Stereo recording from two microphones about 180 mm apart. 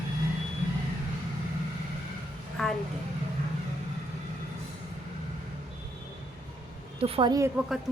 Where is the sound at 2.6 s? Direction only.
Centre (ahead or behind).